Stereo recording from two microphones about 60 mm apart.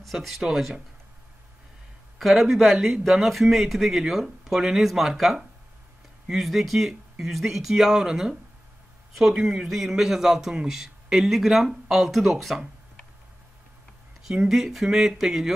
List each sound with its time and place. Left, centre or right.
0.0 s a man's voice: centre
2.1 s a man's voice: centre
14.2 s speech: centre